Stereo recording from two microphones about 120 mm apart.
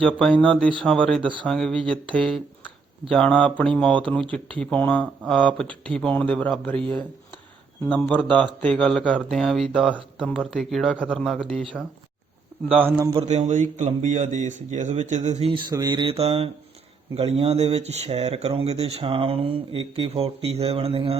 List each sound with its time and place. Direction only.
0.0 s a man's voice: 5° left (ahead or behind)
13.1 s speech: 70° right (ahead or behind)
15.7 s mantra: 35° right (ahead or behind)
16.1 s speech: 55° right (ahead or behind)